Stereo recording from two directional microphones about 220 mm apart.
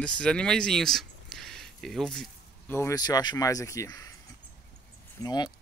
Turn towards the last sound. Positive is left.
turn(degrees=20)  # may be behind; listen again after turning